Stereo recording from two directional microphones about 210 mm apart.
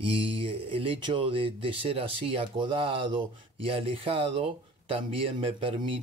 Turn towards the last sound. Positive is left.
turn(degrees=-25)  # may be behind; listen again after turning